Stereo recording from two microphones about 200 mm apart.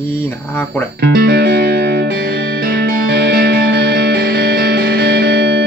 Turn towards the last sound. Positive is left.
turn(degrees=-55)  # may be behind; listen again after turning